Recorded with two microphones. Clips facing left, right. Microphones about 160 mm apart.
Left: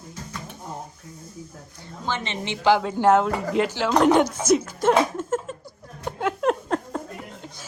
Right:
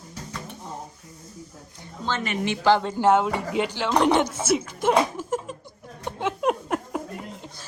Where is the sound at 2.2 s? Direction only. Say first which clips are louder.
Right 4 dB; 25° left (ahead or behind).